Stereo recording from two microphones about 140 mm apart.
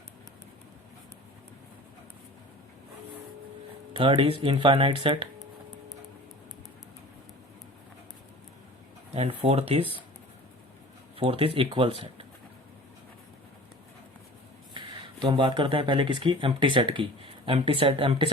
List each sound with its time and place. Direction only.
3.9 s speech: 40° right (ahead or behind)
9.1 s speech: 45° right (ahead or behind)
11.2 s speech: 40° right (ahead or behind)
14.7 s speech: 35° right (ahead or behind)